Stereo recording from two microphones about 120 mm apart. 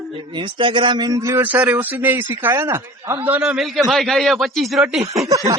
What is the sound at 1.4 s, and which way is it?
A man's voice, 15° right (ahead or behind).